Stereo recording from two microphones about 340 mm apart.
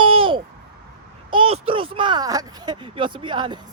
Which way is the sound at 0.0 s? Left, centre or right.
Centre.